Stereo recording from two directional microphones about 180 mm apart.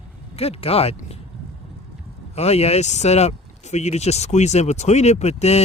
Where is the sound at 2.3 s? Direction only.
35° left (ahead or behind).